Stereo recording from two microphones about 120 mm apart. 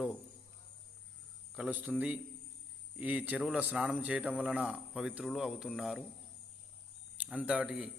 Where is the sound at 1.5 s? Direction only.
10° right (ahead or behind).